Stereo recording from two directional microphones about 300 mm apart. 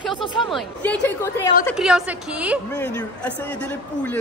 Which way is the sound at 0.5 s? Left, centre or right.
Centre.